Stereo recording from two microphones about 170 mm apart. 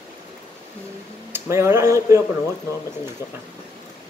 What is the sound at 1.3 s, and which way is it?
Speech, 15° right (ahead or behind).